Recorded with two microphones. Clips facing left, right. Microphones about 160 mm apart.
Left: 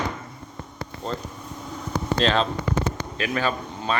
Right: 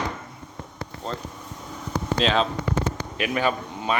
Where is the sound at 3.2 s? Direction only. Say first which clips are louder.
Right 1 dB; 15° right (ahead or behind).